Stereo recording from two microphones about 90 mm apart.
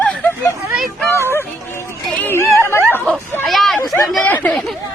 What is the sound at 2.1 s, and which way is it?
Chatter, 25° left (ahead or behind).